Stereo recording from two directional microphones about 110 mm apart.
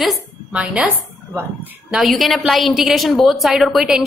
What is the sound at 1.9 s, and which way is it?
A woman's voice, centre (ahead or behind).